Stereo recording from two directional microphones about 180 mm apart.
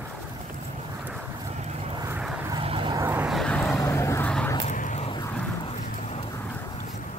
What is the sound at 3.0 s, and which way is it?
Vehicle, 15° right (ahead or behind).